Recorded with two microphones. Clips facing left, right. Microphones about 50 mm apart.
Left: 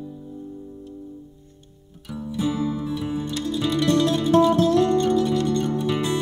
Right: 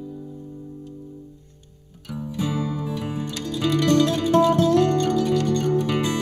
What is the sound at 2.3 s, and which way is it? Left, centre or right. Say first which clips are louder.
Music: left 2 dB; right.